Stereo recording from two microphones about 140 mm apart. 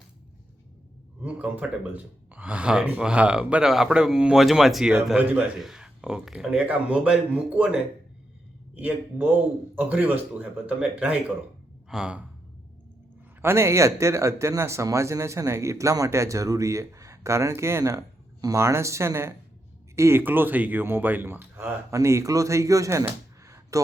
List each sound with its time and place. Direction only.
1.2 s speech: 10° right (ahead or behind)
13.4 s speech: 20° right (ahead or behind)
23.4 s a sound: 20° right (ahead or behind)